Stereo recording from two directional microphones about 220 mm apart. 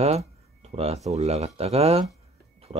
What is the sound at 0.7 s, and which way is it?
Speech, 25° right (ahead or behind).